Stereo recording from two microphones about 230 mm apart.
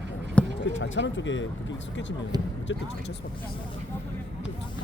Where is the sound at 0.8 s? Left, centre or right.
Left.